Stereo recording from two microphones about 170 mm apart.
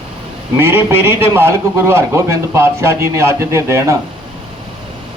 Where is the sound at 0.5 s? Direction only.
15° right (ahead or behind).